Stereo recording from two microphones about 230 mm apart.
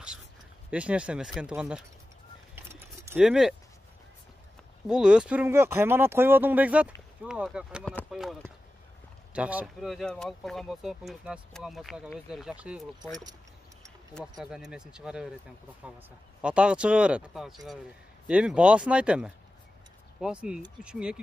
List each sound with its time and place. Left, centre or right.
0.7 s speech: centre
2.5 s keys jangling: centre
4.8 s speech: centre
14.1 s speech: centre
16.3 s speech: centre